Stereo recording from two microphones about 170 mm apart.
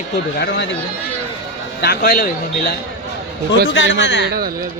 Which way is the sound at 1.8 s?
65° left (ahead or behind).